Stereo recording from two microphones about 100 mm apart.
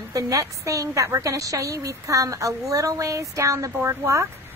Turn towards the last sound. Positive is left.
turn(degrees=-30)  # may be behind; listen again after turning